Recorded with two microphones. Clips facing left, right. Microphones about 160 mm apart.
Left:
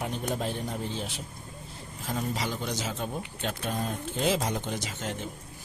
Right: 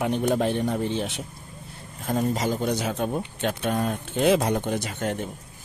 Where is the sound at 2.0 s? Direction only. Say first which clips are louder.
Right 7 dB; 45° right (ahead or behind).